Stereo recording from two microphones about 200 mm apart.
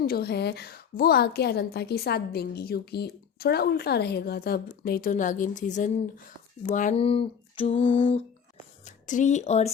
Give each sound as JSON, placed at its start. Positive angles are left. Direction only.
{"t": 0.0, "sound": "a woman's voice", "side_deg": 50}
{"t": 6.6, "sound": "a sound", "side_deg": 40}
{"t": 9.0, "sound": "speech", "side_deg": 40}